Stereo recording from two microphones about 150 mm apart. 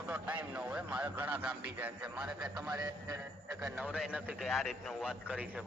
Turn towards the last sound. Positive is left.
turn(degrees=-10)  # may be behind; listen again after turning